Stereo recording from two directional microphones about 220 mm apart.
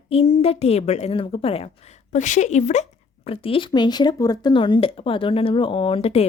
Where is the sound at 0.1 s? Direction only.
25° left (ahead or behind).